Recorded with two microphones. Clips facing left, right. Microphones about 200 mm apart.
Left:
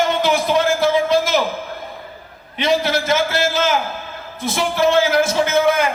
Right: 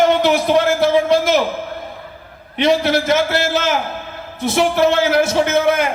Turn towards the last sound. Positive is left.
turn(degrees=-60)  # may be behind; listen again after turning